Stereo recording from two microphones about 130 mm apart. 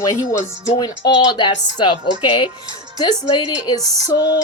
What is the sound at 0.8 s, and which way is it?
A woman's voice, 35° left (ahead or behind).